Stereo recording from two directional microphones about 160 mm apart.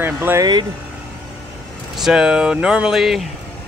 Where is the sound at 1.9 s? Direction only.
5° right (ahead or behind).